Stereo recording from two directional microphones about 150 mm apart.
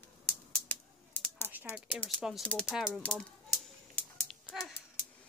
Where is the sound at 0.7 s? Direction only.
15° left (ahead or behind).